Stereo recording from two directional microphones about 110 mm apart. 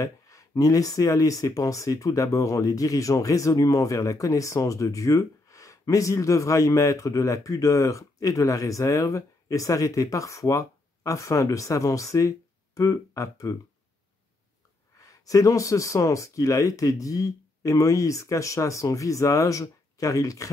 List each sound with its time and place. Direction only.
0.0 s speech: 30° left (ahead or behind)
15.0 s speech: 30° left (ahead or behind)